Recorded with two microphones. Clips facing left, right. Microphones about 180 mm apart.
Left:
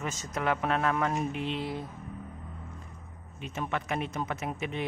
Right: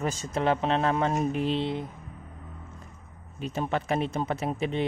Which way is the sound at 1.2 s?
40° right (ahead or behind).